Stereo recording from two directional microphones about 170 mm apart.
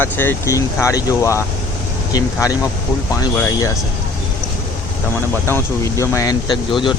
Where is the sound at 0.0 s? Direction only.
10° left (ahead or behind).